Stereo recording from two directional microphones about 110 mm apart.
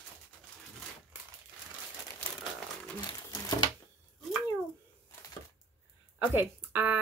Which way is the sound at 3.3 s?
40° left (ahead or behind).